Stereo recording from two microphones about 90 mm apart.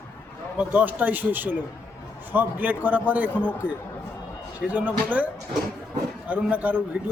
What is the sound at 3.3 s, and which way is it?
Speech, 20° left (ahead or behind).